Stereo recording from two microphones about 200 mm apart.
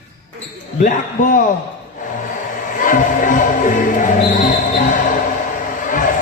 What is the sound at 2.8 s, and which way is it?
Music, 40° left (ahead or behind).